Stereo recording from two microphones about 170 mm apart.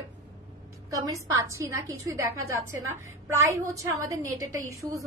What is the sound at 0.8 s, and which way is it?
A woman's voice, 20° right (ahead or behind).